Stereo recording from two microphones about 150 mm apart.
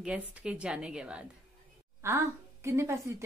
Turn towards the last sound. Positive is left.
turn(degrees=-20)  # may be behind; listen again after turning